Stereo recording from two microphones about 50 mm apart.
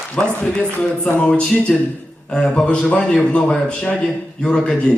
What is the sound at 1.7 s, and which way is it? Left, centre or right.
Speech, centre.